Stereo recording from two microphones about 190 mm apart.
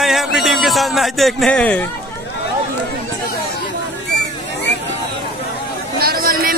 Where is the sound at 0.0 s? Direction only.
Centre (ahead or behind).